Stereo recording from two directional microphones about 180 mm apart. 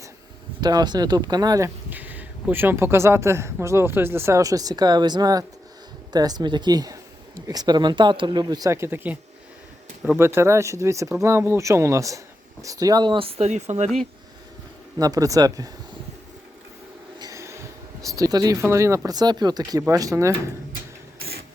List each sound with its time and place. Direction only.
0.6 s speech: 25° right (ahead or behind)
10.2 s speech: 15° right (ahead or behind); by 13.9 s 40° right (ahead or behind)
14.9 s speech: 20° right (ahead or behind)
17.2 s a sound: 20° right (ahead or behind)
18.2 s speech: 20° right (ahead or behind)
21.2 s printer: 60° right (ahead or behind)